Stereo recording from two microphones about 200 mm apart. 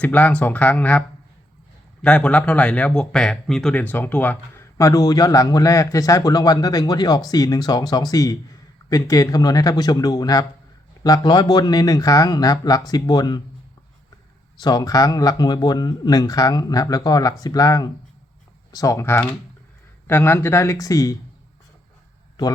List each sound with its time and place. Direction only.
0.0 s speech: 5° left (ahead or behind)
14.6 s speech: 20° left (ahead or behind)